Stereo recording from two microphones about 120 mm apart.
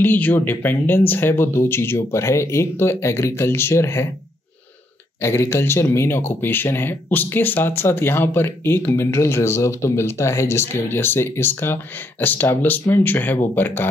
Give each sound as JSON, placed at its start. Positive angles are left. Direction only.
{"t": 0.0, "sound": "speech", "side_deg": 15}
{"t": 5.2, "sound": "speech", "side_deg": 25}